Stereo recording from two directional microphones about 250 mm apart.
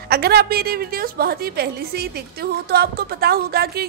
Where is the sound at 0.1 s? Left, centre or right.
Right.